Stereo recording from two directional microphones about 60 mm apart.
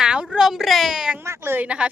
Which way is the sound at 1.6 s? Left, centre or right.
Centre.